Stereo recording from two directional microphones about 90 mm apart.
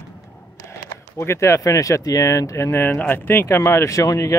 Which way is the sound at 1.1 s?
30° left (ahead or behind).